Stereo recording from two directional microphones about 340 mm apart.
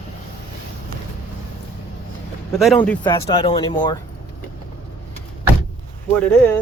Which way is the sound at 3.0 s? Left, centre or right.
Centre.